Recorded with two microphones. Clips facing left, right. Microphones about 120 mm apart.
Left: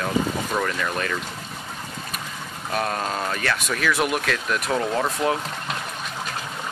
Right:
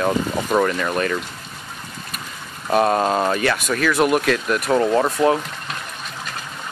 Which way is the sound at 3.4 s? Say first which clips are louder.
Right 4 dB; 5° right (ahead or behind).